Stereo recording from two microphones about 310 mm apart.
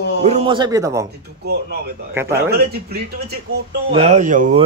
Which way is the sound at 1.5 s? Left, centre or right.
Right.